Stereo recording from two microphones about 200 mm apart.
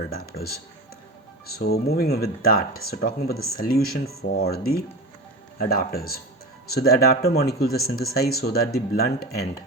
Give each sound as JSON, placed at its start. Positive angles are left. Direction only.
{"t": 1.5, "sound": "speech", "side_deg": 55}